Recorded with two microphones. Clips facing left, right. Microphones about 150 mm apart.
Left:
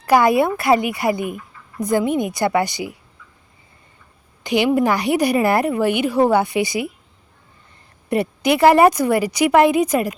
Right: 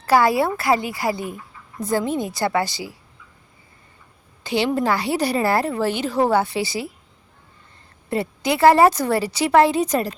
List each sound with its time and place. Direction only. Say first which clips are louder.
0.0 s a woman's voice: left 2 dB; 15° left (ahead or behind)
4.4 s a woman's voice: left 4 dB; 15° left (ahead or behind)
8.1 s a woman's voice: left 4 dB; 20° left (ahead or behind)